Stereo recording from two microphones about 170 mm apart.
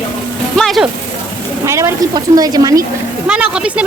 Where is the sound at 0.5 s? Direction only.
Centre (ahead or behind).